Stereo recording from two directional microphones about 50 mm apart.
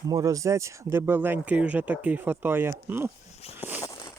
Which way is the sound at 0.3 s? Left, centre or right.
Right.